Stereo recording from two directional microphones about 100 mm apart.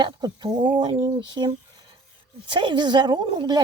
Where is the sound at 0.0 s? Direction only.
45° right (ahead or behind).